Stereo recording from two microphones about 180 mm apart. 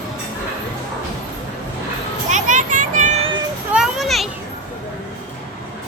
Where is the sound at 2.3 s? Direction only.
45° right (ahead or behind).